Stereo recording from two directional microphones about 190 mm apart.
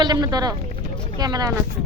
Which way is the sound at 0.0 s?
20° right (ahead or behind).